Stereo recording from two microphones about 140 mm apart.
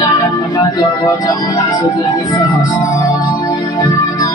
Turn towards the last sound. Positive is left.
turn(degrees=25)  # may be behind; listen again after turning